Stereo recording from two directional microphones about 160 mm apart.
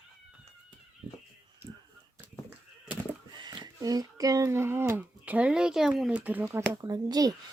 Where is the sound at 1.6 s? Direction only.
20° right (ahead or behind).